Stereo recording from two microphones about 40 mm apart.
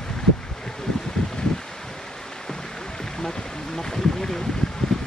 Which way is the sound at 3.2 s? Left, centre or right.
Centre.